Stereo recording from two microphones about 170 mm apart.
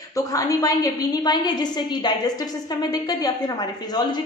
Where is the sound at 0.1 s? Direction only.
20° left (ahead or behind).